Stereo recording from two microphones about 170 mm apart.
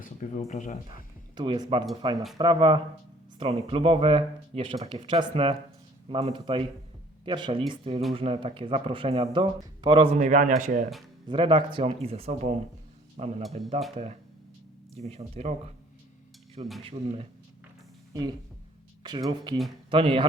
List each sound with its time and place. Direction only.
0.0 s speech: 45° left (ahead or behind)
1.4 s speech: 30° right (ahead or behind)
10.2 s a man's voice: 45° right (ahead or behind)
11.3 s a man's voice: 30° right (ahead or behind)
16.8 s speech: 35° right (ahead or behind)
18.1 s speech: 25° right (ahead or behind)